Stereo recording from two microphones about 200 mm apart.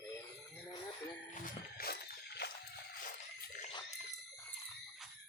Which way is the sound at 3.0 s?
40° left (ahead or behind).